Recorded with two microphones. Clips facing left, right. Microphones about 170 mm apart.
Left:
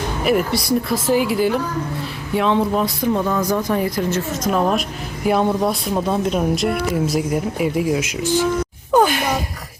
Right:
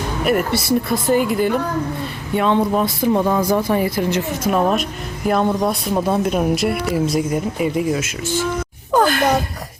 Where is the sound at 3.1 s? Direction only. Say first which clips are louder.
Right 4 dB; 15° right (ahead or behind); by 8.4 s 15° left (ahead or behind).